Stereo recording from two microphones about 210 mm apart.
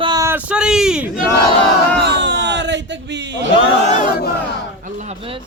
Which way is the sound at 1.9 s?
55° right (ahead or behind).